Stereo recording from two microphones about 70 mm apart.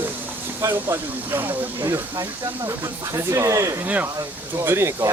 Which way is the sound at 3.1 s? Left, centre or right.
Right.